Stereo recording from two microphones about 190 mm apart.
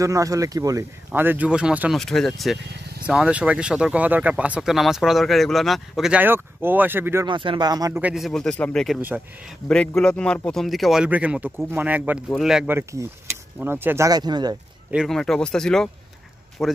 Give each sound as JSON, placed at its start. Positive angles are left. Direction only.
{"t": 0.0, "sound": "speech", "side_deg": -15}
{"t": 7.2, "sound": "speech", "side_deg": -25}
{"t": 8.0, "sound": "speech", "side_deg": 0}
{"t": 14.9, "sound": "speech", "side_deg": 0}